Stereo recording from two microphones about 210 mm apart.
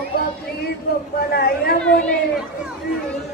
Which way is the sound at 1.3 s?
45° left (ahead or behind).